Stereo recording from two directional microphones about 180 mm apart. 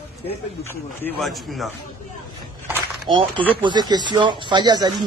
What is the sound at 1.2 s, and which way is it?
Speech, centre (ahead or behind).